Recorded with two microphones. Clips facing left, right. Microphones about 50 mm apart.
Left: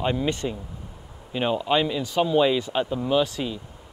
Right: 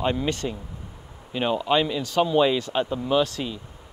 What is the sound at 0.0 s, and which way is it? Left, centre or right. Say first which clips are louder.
Speech: even; centre.